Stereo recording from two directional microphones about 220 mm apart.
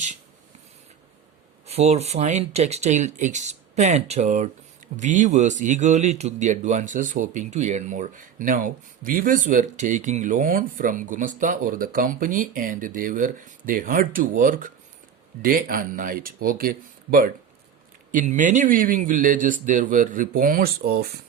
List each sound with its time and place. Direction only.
1.6 s speech: 30° right (ahead or behind); by 21.1 s 45° right (ahead or behind)